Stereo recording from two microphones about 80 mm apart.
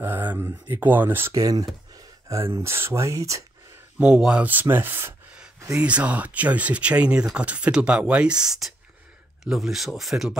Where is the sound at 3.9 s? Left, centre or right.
Centre; by 5.1 s right.